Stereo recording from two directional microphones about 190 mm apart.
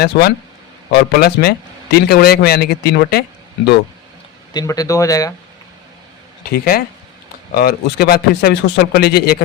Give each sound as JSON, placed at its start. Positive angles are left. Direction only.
{"t": 0.0, "sound": "a man's voice", "side_deg": 60}
{"t": 4.5, "sound": "speech", "side_deg": 20}
{"t": 6.5, "sound": "a man's voice", "side_deg": 55}